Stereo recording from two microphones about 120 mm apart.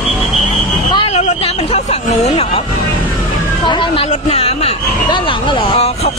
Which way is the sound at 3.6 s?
40° left (ahead or behind).